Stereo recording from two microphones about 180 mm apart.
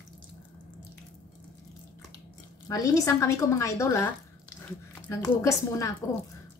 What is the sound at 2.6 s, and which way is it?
A woman's voice, 20° left (ahead or behind).